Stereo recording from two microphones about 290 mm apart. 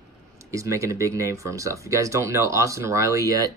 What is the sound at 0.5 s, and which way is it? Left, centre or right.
Speech, centre.